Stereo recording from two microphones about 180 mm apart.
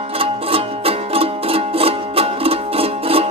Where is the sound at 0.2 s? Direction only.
30° right (ahead or behind).